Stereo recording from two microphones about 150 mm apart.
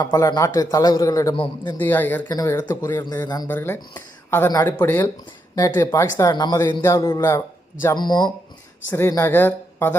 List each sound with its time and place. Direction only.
0.0 s a man's voice: 25° left (ahead or behind)
2.3 s a man's voice: 25° left (ahead or behind)
3.5 s speech: 15° left (ahead or behind)
4.4 s a man's voice: 25° left (ahead or behind)
4.8 s a man's voice: 15° left (ahead or behind)
7.9 s a man's voice: 30° left (ahead or behind)
9.0 s speech: 15° left (ahead or behind)